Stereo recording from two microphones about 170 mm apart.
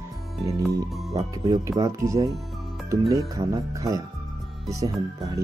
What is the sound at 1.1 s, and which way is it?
Speech, 20° right (ahead or behind).